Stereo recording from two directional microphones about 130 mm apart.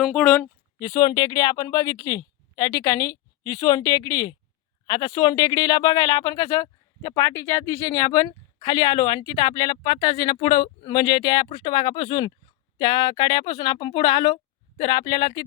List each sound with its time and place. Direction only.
0.0 s speech: 5° left (ahead or behind)
0.8 s a woman's voice: 35° left (ahead or behind)